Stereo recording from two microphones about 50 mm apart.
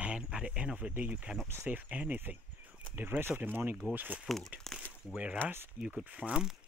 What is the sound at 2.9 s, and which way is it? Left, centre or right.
Speech, right.